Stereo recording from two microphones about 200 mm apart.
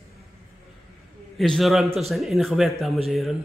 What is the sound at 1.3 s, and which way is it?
A man's voice, centre (ahead or behind).